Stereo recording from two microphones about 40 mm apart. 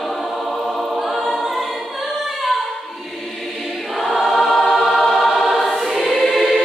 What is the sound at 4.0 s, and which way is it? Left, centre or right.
Choir, centre.